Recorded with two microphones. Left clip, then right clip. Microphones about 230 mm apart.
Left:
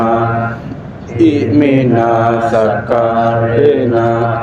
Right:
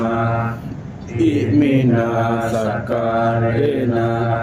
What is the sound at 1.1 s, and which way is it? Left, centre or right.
Mantra, centre.